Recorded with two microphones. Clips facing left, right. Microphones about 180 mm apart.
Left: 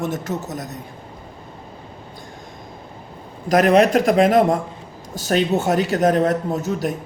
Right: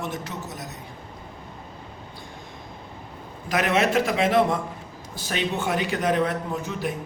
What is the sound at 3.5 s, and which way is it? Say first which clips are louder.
A man's voice: left 8 dB; 40° left (ahead or behind).